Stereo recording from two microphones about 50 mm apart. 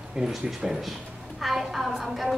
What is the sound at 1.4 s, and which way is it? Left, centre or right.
Speech, centre.